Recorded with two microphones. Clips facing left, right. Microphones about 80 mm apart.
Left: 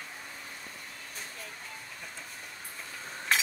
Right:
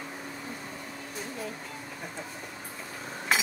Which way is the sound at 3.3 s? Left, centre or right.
Centre.